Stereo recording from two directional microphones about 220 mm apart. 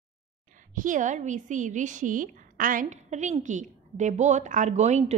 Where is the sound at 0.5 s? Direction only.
35° right (ahead or behind).